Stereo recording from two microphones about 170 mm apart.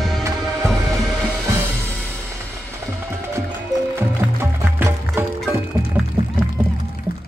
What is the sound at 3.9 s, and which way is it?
Music, 15° right (ahead or behind).